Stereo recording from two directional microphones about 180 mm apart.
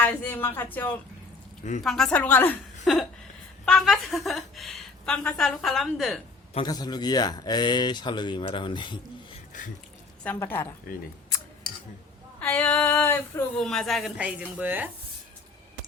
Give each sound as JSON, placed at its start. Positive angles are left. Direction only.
{"t": 0.0, "sound": "female singing", "side_deg": 10}
{"t": 2.8, "sound": "chuckle", "side_deg": 0}
{"t": 3.7, "sound": "a woman's voice", "side_deg": 0}
{"t": 6.5, "sound": "speech", "side_deg": 25}
{"t": 9.5, "sound": "speech", "side_deg": 45}
{"t": 10.2, "sound": "female singing", "side_deg": 10}
{"t": 12.4, "sound": "female singing", "side_deg": 10}
{"t": 13.6, "sound": "a woman's voice", "side_deg": 0}